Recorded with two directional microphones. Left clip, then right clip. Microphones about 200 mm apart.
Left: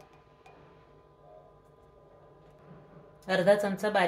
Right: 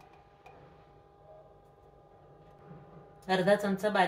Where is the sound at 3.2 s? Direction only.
45° left (ahead or behind).